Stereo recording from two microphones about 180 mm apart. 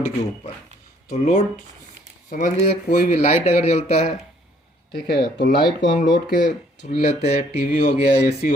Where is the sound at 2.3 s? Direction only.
50° left (ahead or behind).